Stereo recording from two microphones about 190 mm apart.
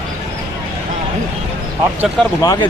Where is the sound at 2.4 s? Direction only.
20° left (ahead or behind).